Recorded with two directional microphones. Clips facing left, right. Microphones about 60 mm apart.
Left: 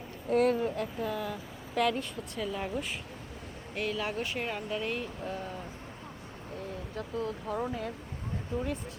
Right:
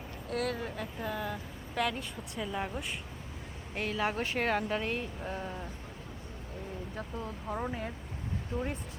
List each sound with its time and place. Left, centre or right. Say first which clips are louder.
0.3 s speech: left 8 dB; left
0.8 s speech: left 3 dB; centre
3.8 s speech: right 1 dB; right
4.4 s a woman's voice: right 4 dB; right
4.8 s speech: left 1 dB; right
6.9 s speech: left 8 dB; right
8.5 s speech: left 1 dB; right